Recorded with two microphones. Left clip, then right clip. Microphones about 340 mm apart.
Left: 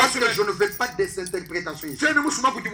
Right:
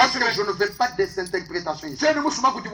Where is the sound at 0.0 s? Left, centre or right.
Right.